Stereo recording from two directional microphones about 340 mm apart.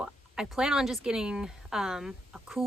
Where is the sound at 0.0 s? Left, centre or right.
Centre.